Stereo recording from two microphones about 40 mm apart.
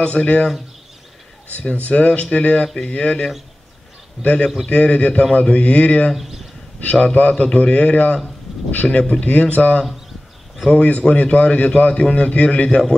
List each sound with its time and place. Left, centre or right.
0.0 s speech: left
1.7 s a man's voice: left
2.6 s a man's voice: left
6.1 s speech: centre
6.8 s a man's voice: left
8.8 s speech: centre
9.2 s a man's voice: left